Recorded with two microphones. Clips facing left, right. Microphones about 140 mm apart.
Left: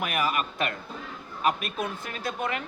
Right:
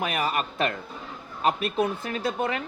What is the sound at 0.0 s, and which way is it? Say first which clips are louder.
Speech: right 1 dB; 30° right (ahead or behind).